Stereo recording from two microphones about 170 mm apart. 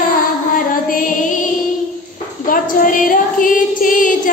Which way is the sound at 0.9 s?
55° left (ahead or behind).